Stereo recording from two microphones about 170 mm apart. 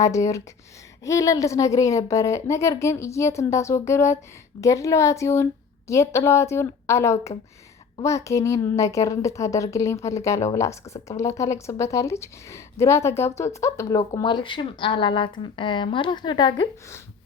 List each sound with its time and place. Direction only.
0.0 s a woman's voice: 20° left (ahead or behind)